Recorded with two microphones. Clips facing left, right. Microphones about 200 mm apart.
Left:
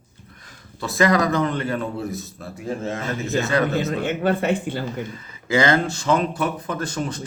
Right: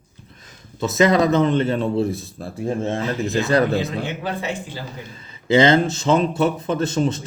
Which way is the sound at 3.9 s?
50° left (ahead or behind).